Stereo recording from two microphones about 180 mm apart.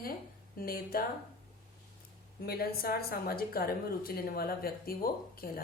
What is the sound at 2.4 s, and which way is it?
A woman's voice, 60° left (ahead or behind).